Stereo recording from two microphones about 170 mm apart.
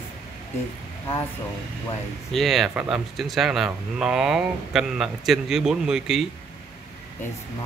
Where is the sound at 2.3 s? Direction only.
Centre (ahead or behind).